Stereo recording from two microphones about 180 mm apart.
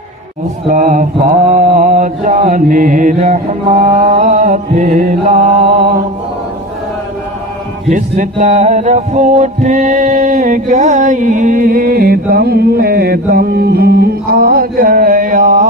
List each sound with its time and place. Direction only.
0.7 s mantra: 45° right (ahead or behind)
7.9 s mantra: 40° right (ahead or behind)